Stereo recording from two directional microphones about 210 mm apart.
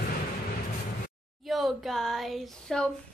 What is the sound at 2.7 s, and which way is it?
Speech, centre (ahead or behind).